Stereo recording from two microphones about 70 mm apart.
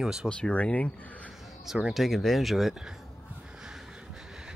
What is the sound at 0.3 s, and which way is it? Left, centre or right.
Speech, centre.